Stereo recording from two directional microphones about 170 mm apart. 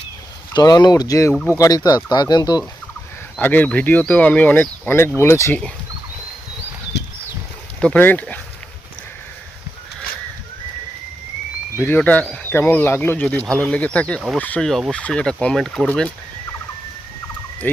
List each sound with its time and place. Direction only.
0.5 s speech: 25° left (ahead or behind)
3.3 s speech: 10° left (ahead or behind)
7.8 s speech: 10° left (ahead or behind)
11.8 s speech: 10° left (ahead or behind)